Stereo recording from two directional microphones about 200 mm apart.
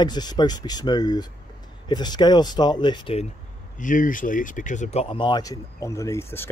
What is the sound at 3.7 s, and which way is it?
Speech, 40° left (ahead or behind).